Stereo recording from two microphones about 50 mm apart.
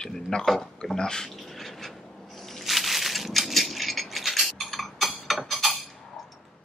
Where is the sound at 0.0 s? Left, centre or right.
Centre.